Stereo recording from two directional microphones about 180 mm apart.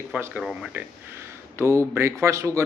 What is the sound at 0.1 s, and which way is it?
A man's voice, 10° right (ahead or behind).